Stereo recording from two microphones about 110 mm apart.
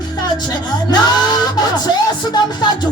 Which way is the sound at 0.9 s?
40° left (ahead or behind).